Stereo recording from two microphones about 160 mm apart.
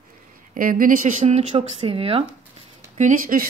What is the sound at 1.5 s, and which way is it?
Speech, 35° right (ahead or behind).